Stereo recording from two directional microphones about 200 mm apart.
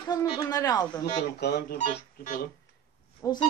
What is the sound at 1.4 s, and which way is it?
Speech, 55° left (ahead or behind).